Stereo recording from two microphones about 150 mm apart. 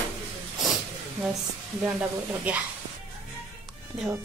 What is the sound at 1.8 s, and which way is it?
Speech, 10° right (ahead or behind).